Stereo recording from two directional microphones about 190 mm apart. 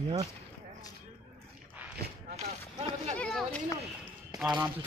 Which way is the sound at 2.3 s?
35° right (ahead or behind).